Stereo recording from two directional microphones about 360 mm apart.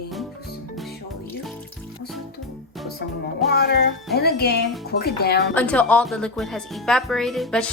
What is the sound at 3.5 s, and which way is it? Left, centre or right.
Speech, left.